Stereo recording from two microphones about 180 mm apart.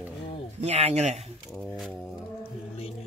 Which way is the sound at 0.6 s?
35° right (ahead or behind).